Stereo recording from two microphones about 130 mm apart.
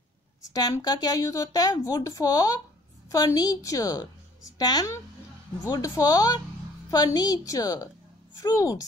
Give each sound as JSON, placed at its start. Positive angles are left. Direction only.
{"t": 0.4, "sound": "a woman's voice", "side_deg": 30}